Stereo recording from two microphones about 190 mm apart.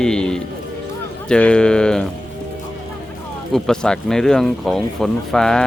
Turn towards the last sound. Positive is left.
turn(degrees=5)  # may be behind; listen again after turning